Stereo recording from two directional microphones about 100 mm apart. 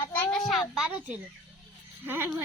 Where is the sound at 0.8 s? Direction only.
10° right (ahead or behind).